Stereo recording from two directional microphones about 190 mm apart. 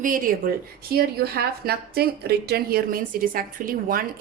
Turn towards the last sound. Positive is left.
turn(degrees=-50)  # may be behind; listen again after turning